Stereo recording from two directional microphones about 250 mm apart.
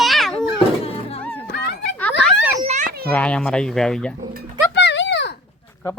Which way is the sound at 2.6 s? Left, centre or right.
Right.